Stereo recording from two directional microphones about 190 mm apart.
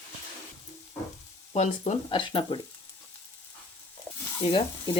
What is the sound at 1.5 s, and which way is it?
Speech, 35° left (ahead or behind).